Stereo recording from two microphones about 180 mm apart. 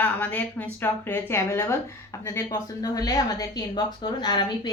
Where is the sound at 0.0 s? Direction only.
10° left (ahead or behind).